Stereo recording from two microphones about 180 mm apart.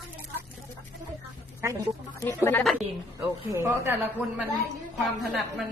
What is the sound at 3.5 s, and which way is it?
Speech, 15° right (ahead or behind).